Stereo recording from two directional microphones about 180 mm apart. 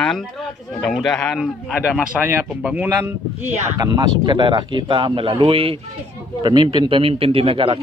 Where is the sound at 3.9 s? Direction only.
25° right (ahead or behind).